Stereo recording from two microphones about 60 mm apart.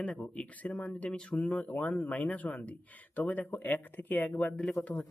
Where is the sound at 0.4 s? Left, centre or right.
Left.